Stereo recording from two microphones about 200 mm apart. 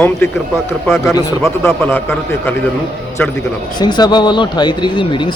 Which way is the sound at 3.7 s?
20° left (ahead or behind).